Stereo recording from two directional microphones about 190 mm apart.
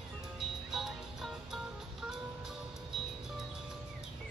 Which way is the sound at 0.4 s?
Centre (ahead or behind).